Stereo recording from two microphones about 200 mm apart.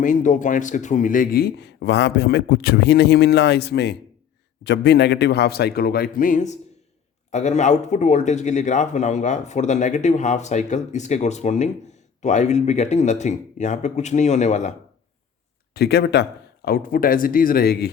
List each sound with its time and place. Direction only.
0.0 s a man's voice: 40° left (ahead or behind)
15.7 s a man's voice: 55° left (ahead or behind)
16.6 s speech: 45° left (ahead or behind)